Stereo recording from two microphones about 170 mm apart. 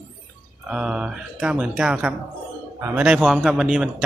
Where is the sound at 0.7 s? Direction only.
5° right (ahead or behind).